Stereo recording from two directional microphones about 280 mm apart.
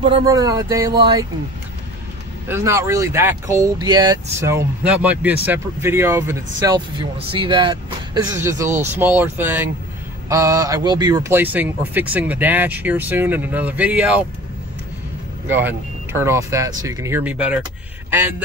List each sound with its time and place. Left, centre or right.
0.0 s speech: centre
2.4 s speech: centre
15.4 s speech: centre